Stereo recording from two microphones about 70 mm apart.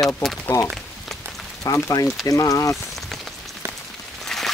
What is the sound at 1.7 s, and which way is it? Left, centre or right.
Speech, left.